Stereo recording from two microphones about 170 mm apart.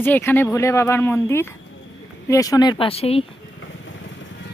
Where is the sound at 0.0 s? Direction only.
10° left (ahead or behind); by 3.2 s 35° left (ahead or behind).